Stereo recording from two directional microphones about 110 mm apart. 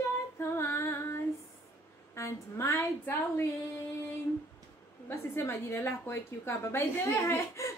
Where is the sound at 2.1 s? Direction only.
25° left (ahead or behind).